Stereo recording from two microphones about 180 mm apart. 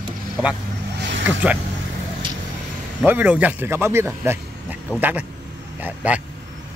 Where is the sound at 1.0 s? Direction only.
80° right.